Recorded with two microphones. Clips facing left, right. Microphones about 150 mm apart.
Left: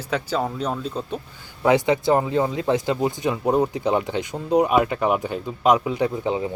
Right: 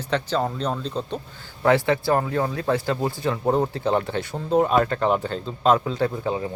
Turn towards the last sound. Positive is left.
turn(degrees=20)  # may be behind; listen again after turning